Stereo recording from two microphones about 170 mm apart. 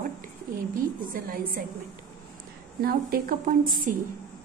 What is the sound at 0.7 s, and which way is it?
Speech, 55° right (ahead or behind).